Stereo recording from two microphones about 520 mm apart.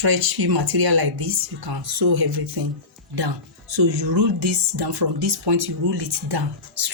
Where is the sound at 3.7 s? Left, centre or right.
Right.